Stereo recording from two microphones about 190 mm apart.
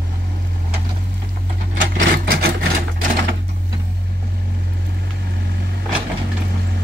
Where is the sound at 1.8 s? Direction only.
50° right (ahead or behind).